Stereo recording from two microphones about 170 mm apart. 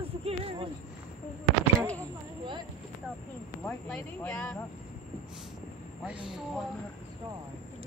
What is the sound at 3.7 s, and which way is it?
Speech, 5° left (ahead or behind).